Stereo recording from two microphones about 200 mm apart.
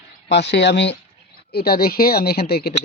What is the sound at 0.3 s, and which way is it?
Speech, 60° left (ahead or behind).